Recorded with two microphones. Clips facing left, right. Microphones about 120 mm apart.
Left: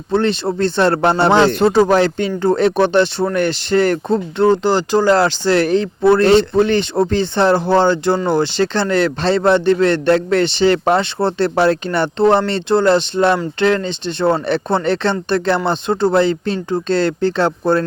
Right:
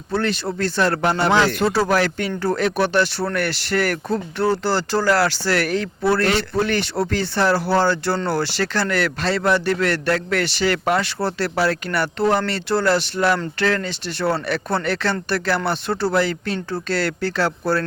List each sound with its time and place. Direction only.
0.1 s speech: 25° left (ahead or behind)